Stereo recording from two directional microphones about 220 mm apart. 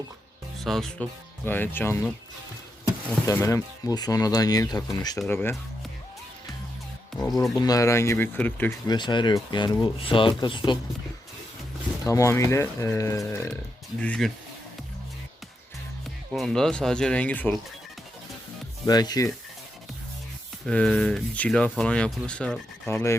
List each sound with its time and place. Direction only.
0.6 s speech: centre (ahead or behind)
3.1 s speech: 10° left (ahead or behind)
7.5 s speech: 15° left (ahead or behind)
8.9 s speech: 20° left (ahead or behind)
12.0 s speech: 15° left (ahead or behind)
16.3 s speech: centre (ahead or behind)
18.9 s speech: 15° left (ahead or behind)
20.7 s speech: 5° left (ahead or behind)